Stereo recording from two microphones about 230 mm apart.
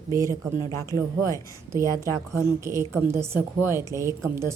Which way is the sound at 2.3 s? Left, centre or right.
Centre.